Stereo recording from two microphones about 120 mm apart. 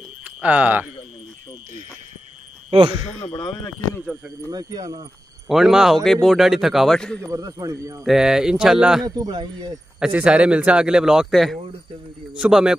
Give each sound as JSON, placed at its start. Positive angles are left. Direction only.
{"t": 0.2, "sound": "speech", "side_deg": -10}
{"t": 2.7, "sound": "speech", "side_deg": -50}
{"t": 3.1, "sound": "speech", "side_deg": 60}
{"t": 3.3, "sound": "speech", "side_deg": 40}
{"t": 4.5, "sound": "speech", "side_deg": -35}
{"t": 5.5, "sound": "speech", "side_deg": -5}
{"t": 7.2, "sound": "speech", "side_deg": -30}
{"t": 8.0, "sound": "speech", "side_deg": -5}
{"t": 9.0, "sound": "speech", "side_deg": -35}
{"t": 9.9, "sound": "a man's voice", "side_deg": -10}